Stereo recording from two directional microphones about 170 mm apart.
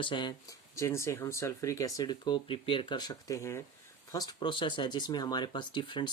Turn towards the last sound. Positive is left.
turn(degrees=25)  # may be behind; listen again after turning